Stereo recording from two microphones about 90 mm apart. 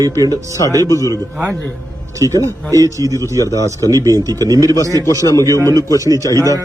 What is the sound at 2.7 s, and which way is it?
Speech, 40° right (ahead or behind).